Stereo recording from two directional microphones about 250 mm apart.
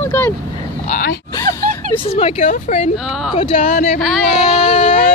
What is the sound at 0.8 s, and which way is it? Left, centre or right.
Grunt, left.